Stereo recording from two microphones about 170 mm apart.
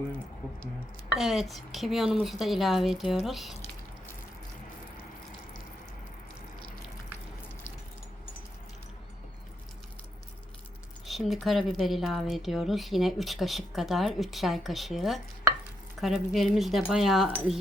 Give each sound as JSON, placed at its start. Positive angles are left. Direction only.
{"t": 1.1, "sound": "a woman's voice", "side_deg": 0}
{"t": 11.0, "sound": "a woman's voice", "side_deg": 0}